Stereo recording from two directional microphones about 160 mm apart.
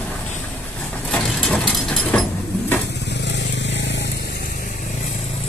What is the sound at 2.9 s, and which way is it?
Vehicle, 90° left.